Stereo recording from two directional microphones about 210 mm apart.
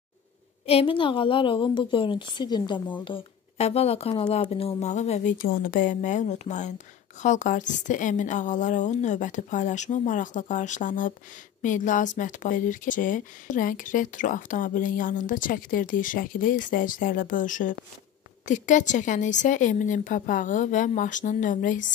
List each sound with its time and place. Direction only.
0.7 s a woman's voice: 25° left (ahead or behind)